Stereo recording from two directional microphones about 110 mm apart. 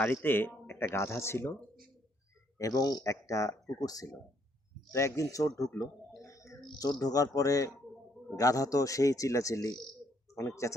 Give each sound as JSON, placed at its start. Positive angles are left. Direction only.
{"t": 0.0, "sound": "speech", "side_deg": 20}
{"t": 2.6, "sound": "speech", "side_deg": 35}
{"t": 6.2, "sound": "a sound", "side_deg": 30}
{"t": 6.7, "sound": "speech", "side_deg": 35}